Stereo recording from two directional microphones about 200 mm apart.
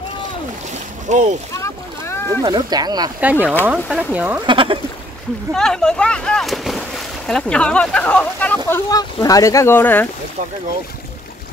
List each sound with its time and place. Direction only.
1.0 s speech: 35° right (ahead or behind)
1.5 s boat: 15° left (ahead or behind)
2.4 s speech: 20° right (ahead or behind)
3.2 s speech: 5° right (ahead or behind)
4.5 s speech: 25° right (ahead or behind)
5.5 s speech: 5° left (ahead or behind)